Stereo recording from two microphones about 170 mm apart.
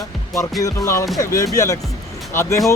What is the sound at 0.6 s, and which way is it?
Music, 20° left (ahead or behind).